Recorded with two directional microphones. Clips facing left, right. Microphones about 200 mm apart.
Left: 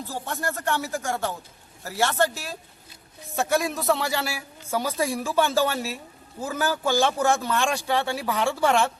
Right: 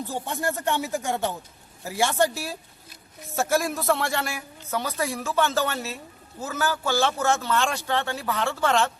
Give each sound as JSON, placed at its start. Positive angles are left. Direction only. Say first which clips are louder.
{"t": 0.1, "sound": "a man's voice", "louder": "even", "side_deg": -15}